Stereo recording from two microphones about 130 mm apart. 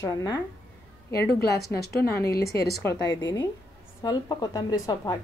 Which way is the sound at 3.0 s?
30° left (ahead or behind).